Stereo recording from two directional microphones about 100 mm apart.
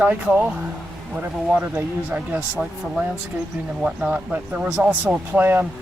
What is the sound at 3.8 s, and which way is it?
Speech, 15° right (ahead or behind).